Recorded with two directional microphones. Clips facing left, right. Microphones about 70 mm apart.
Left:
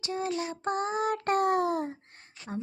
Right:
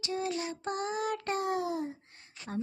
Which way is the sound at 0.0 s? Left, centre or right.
Left.